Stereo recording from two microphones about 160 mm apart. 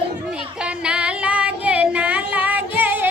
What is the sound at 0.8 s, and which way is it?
Music, 5° right (ahead or behind).